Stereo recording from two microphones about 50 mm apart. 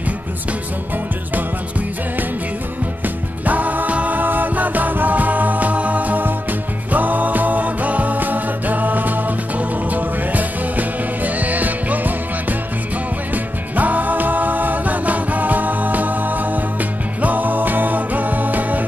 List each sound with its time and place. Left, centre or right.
3.4 s music: right